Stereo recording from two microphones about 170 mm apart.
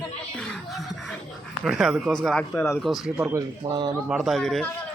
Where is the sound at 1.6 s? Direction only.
5° right (ahead or behind).